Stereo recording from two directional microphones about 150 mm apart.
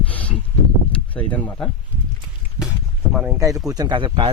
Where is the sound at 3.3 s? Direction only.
20° right (ahead or behind).